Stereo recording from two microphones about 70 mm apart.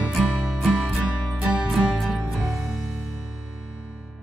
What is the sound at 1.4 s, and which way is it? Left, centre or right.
Music, centre.